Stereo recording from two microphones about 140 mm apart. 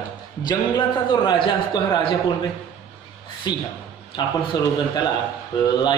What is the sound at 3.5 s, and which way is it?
A man's voice, 30° left (ahead or behind).